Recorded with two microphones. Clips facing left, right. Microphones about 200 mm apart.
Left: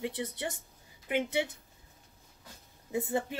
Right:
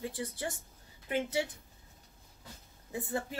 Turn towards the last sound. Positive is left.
turn(degrees=25)  # may be behind; listen again after turning